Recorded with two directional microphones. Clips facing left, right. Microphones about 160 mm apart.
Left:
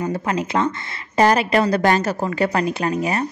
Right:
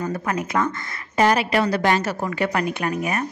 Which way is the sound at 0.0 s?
25° left (ahead or behind).